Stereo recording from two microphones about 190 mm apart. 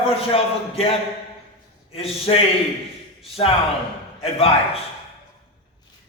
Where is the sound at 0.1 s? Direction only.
30° left (ahead or behind).